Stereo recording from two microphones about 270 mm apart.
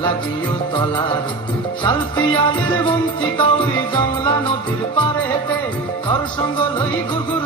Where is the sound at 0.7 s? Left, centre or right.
Centre.